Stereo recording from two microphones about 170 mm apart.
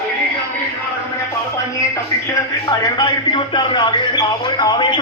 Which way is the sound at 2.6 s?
25° left (ahead or behind).